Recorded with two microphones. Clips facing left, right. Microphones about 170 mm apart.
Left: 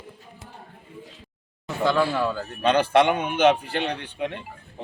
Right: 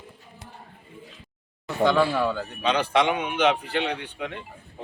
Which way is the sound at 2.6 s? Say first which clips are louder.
Left 4 dB; 50° left (ahead or behind).